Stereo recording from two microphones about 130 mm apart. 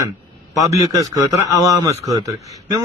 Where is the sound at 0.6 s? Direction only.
25° right (ahead or behind).